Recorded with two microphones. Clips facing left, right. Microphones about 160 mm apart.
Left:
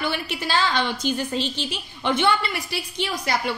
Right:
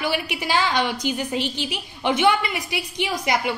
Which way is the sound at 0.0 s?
15° right (ahead or behind).